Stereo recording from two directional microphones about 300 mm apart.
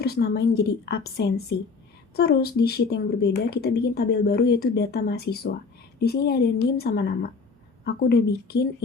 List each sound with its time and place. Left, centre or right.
0.0 s speech: left